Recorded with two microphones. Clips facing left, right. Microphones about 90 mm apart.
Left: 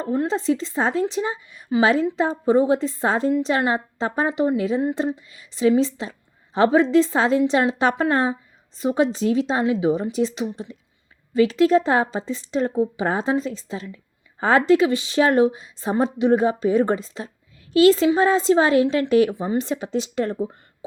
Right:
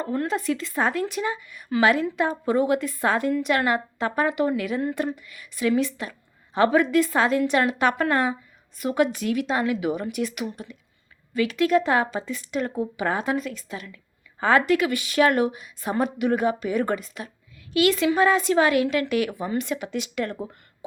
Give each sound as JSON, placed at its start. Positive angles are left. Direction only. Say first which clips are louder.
{"t": 0.0, "sound": "a woman's voice", "louder": "left 3 dB", "side_deg": 20}